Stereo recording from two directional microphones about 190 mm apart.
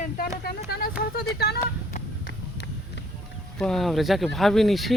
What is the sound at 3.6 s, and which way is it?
Speech, centre (ahead or behind).